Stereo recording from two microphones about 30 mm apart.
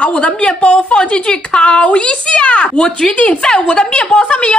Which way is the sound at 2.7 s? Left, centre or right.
Left.